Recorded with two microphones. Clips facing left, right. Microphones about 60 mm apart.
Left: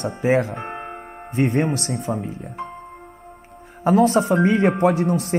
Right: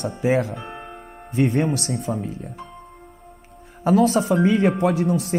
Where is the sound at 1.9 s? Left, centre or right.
Left.